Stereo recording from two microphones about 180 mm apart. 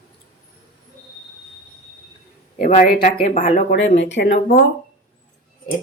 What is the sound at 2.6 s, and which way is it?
A woman's voice, 50° left (ahead or behind).